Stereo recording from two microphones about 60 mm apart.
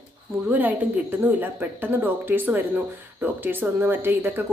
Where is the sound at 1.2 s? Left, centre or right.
Right.